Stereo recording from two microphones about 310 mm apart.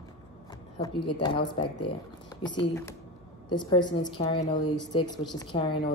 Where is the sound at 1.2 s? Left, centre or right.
Centre.